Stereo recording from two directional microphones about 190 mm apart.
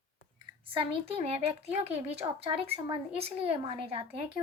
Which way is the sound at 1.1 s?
30° right (ahead or behind).